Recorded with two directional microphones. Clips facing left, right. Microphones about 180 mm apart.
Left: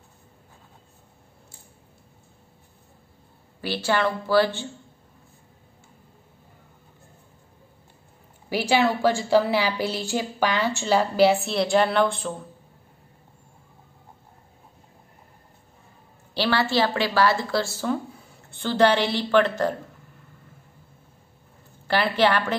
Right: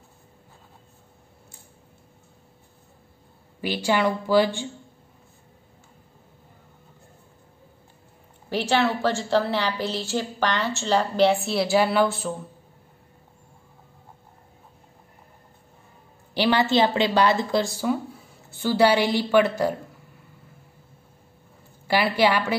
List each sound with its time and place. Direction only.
3.6 s a woman's voice: 15° right (ahead or behind)
8.5 s a woman's voice: 10° left (ahead or behind)
16.3 s a woman's voice: 20° right (ahead or behind)
21.8 s a woman's voice: 10° right (ahead or behind)